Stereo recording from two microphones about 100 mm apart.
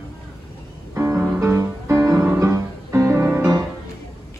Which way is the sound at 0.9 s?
25° right (ahead or behind).